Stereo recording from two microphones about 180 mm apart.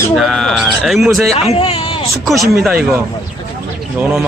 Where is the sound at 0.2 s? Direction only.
Centre (ahead or behind).